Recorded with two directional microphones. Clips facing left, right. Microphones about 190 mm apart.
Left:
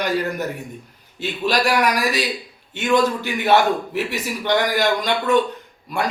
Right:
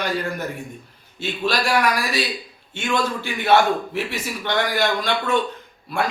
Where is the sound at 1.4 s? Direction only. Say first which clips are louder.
Left 2 dB; 15° left (ahead or behind).